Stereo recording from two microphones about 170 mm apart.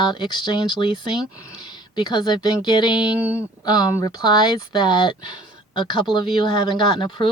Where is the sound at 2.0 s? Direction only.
25° left (ahead or behind).